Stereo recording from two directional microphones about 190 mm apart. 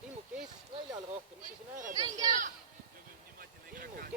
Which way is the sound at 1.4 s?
45° right (ahead or behind).